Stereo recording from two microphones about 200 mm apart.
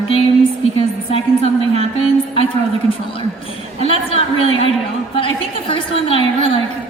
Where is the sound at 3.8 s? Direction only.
30° left (ahead or behind).